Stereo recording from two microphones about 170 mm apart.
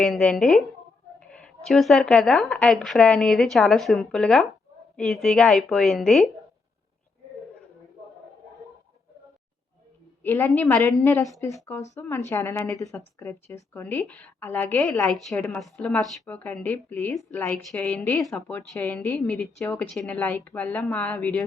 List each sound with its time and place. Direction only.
0.0 s speech: centre (ahead or behind)
10.2 s speech: 10° left (ahead or behind)